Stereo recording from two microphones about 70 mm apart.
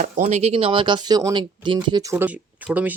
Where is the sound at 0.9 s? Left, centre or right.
Right.